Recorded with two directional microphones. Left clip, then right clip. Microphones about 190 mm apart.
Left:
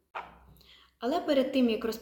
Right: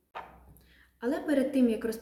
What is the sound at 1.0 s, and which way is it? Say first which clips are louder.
Speech: left 2 dB; 10° right (ahead or behind).